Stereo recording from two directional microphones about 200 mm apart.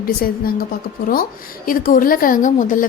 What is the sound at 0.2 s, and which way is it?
A woman's voice, 45° left (ahead or behind).